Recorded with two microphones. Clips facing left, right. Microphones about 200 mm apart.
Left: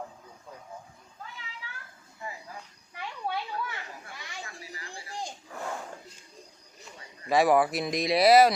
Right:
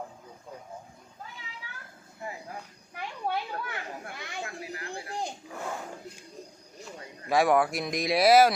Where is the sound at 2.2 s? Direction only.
50° right (ahead or behind).